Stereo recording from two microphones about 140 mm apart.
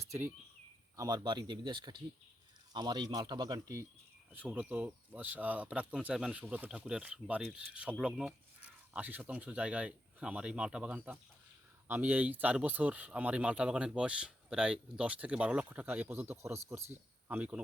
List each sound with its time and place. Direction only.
0.0 s speech: 20° right (ahead or behind)
4.3 s speech: 10° right (ahead or behind)